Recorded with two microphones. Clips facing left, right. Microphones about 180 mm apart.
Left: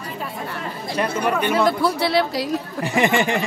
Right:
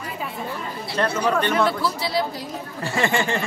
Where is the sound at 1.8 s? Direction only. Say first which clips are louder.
Left 5 dB; 65° left (ahead or behind).